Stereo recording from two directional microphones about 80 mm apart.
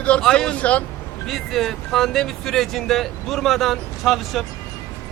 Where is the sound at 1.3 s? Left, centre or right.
Centre.